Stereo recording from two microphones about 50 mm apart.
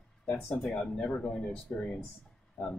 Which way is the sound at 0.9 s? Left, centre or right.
Left.